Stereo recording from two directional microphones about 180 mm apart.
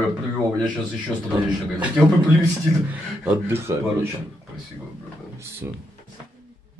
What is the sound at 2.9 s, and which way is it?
Speech, 10° right (ahead or behind).